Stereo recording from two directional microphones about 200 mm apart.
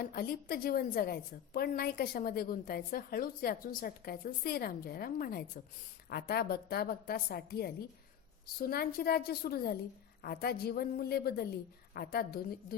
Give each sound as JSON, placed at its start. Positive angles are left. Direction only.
{"t": 0.0, "sound": "a woman's voice", "side_deg": 50}